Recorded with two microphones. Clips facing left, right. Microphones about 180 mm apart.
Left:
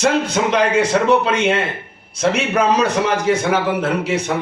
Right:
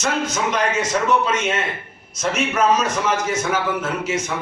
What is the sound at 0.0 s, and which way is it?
A man's voice, 30° left (ahead or behind).